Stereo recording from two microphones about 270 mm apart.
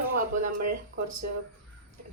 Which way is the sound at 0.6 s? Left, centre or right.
Right.